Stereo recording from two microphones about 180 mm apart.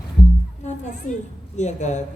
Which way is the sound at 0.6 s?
40° left (ahead or behind).